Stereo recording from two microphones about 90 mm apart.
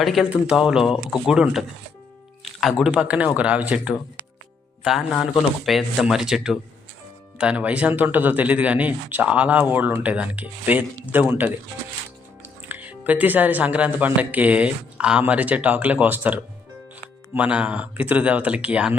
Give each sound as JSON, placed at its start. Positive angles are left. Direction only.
{"t": 0.0, "sound": "speech", "side_deg": 0}
{"t": 2.4, "sound": "music", "side_deg": 0}
{"t": 2.9, "sound": "speech", "side_deg": -15}
{"t": 4.8, "sound": "speech", "side_deg": 0}